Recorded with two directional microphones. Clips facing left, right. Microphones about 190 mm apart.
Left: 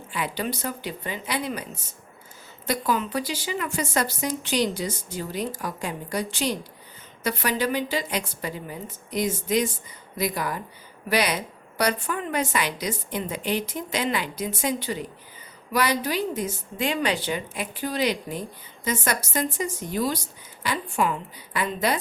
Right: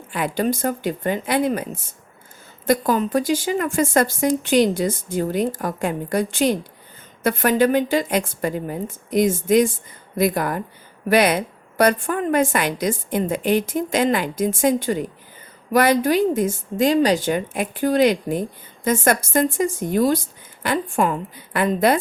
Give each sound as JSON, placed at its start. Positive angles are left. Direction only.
{"t": 0.1, "sound": "speech", "side_deg": -50}